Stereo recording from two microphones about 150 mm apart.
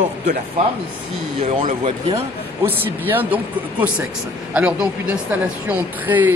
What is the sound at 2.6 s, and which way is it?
Speech, 15° right (ahead or behind).